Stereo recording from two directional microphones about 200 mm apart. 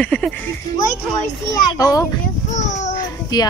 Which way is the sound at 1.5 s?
20° left (ahead or behind).